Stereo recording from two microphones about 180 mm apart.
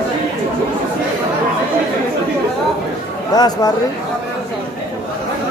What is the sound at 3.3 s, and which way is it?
Speech, 20° left (ahead or behind).